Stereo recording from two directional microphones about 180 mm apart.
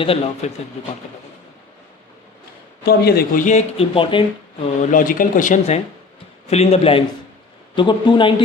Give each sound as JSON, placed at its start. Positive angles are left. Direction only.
{"t": 0.0, "sound": "speech", "side_deg": 30}
{"t": 2.8, "sound": "speech", "side_deg": 60}
{"t": 4.8, "sound": "speech", "side_deg": 45}